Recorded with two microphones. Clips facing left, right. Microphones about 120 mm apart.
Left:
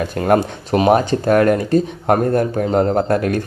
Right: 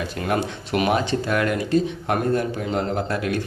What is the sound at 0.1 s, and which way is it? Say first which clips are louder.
Speech: left 10 dB; 45° left (ahead or behind).